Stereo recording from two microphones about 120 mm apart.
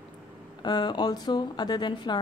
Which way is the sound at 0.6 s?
35° left (ahead or behind).